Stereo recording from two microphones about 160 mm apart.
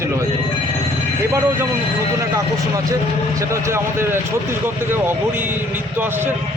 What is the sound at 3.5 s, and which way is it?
Speech, 15° right (ahead or behind).